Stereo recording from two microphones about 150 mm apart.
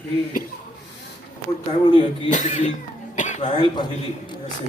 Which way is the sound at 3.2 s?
55° left (ahead or behind).